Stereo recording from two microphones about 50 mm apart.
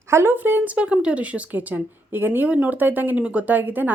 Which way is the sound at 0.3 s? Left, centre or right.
Right.